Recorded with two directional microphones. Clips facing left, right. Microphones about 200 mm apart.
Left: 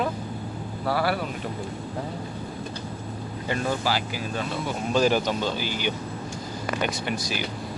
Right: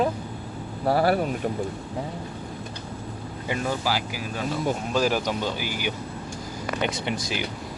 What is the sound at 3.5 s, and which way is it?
Speech, 10° right (ahead or behind).